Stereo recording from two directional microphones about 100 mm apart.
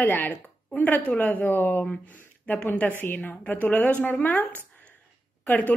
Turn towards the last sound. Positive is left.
turn(degrees=15)  # may be behind; listen again after turning